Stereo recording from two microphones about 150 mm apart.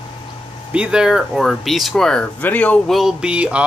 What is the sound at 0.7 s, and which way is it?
Speech, 5° right (ahead or behind).